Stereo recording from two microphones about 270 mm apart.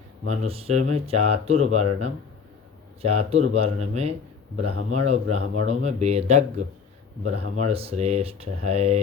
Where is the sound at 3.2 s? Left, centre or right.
Right.